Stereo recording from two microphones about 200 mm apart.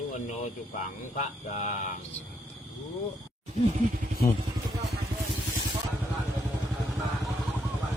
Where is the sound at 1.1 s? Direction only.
35° left (ahead or behind).